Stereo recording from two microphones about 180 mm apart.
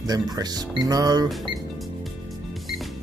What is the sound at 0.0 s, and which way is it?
Speech, 20° right (ahead or behind).